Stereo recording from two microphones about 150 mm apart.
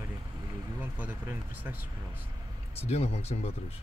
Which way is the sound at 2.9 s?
45° left (ahead or behind).